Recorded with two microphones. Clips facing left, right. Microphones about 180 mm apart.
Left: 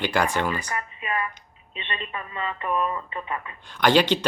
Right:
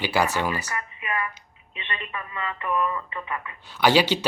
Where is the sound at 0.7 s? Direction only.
30° left (ahead or behind).